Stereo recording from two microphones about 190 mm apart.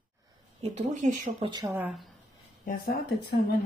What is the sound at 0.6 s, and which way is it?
Speech, 35° right (ahead or behind).